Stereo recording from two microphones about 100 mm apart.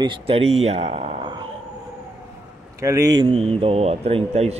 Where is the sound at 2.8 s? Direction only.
35° right (ahead or behind).